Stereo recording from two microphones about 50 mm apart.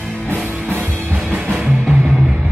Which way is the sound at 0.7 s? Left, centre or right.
Right.